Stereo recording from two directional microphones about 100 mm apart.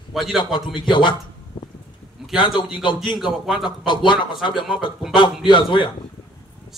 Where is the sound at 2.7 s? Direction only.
50° left (ahead or behind).